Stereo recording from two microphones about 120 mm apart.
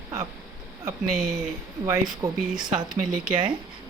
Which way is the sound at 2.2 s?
30° right (ahead or behind).